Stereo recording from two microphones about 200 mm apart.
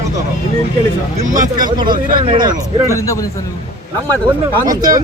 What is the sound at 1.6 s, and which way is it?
Speech, 20° right (ahead or behind).